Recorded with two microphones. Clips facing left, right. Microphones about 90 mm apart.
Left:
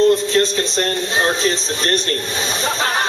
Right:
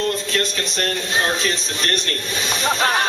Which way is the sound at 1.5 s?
30° left (ahead or behind).